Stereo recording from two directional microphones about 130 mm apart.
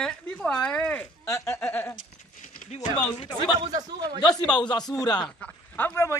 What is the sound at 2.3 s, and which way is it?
Clip-clop, 90° left.